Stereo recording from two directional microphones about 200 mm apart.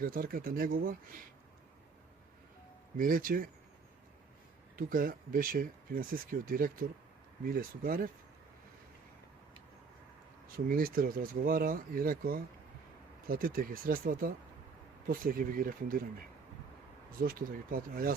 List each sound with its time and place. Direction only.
0.0 s speech: 45° right (ahead or behind)
3.0 s speech: 45° right (ahead or behind)
4.8 s speech: 45° right (ahead or behind)
10.7 s speech: 45° right (ahead or behind)
17.2 s speech: 45° right (ahead or behind)